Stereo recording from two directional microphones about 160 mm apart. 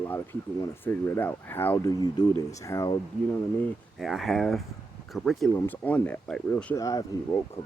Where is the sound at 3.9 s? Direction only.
Centre (ahead or behind).